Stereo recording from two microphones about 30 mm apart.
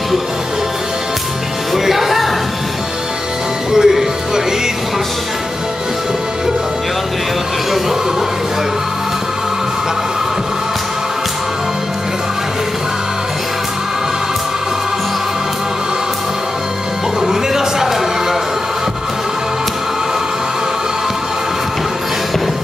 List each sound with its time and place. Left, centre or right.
1.7 s music: centre
3.7 s music: centre
17.3 s a sound: centre